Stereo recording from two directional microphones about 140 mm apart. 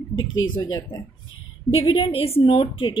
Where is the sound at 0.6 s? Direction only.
30° left (ahead or behind).